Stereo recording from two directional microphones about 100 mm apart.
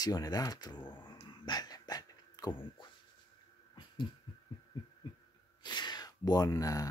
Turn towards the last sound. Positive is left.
turn(degrees=35)  # may be behind; listen again after turning